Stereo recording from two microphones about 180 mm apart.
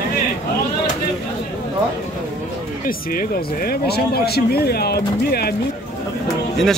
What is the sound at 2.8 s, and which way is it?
Speech, 50° left (ahead or behind).